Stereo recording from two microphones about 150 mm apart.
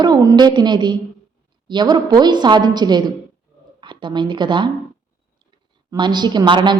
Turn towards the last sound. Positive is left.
turn(degrees=-30)  # may be behind; listen again after turning